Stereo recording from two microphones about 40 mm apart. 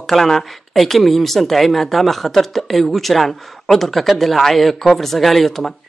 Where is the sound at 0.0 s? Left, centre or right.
Centre.